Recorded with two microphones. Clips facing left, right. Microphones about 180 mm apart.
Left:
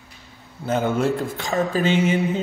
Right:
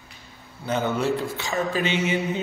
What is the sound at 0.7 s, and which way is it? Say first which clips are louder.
A man's voice: left 3 dB; 45° left (ahead or behind).